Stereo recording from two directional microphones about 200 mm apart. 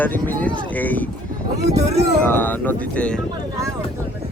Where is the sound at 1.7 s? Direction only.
30° right (ahead or behind).